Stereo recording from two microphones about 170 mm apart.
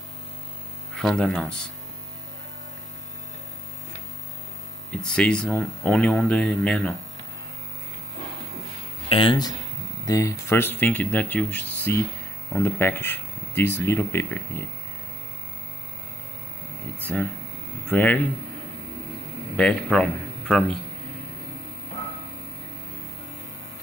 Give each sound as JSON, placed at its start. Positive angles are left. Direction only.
{"t": 0.9, "sound": "speech", "side_deg": 5}
{"t": 4.9, "sound": "speech", "side_deg": 5}
{"t": 9.1, "sound": "speech", "side_deg": 30}
{"t": 17.0, "sound": "speech", "side_deg": 10}
{"t": 19.5, "sound": "speech", "side_deg": 5}